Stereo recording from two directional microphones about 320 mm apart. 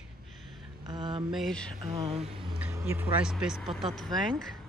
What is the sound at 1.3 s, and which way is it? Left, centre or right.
Speech, centre.